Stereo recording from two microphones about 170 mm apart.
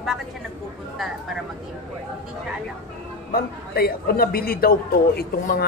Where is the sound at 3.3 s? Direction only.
65° left (ahead or behind).